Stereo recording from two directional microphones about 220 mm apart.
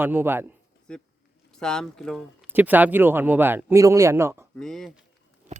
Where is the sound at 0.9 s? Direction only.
5° left (ahead or behind); by 4.5 s 10° right (ahead or behind).